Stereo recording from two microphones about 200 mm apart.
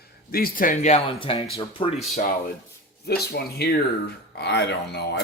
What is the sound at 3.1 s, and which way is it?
Speech, 50° left (ahead or behind).